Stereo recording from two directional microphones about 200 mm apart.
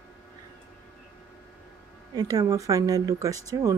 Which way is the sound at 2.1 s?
15° right (ahead or behind).